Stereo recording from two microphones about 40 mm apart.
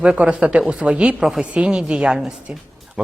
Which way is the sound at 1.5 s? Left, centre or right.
Right.